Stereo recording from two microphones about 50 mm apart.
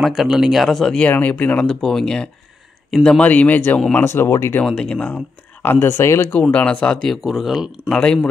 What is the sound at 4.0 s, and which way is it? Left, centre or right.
Speech, left.